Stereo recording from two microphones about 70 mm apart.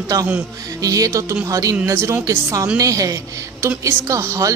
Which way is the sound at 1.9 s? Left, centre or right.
Right.